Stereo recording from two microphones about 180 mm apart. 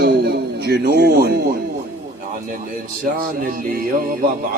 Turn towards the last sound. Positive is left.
turn(degrees=-55)  # may be behind; listen again after turning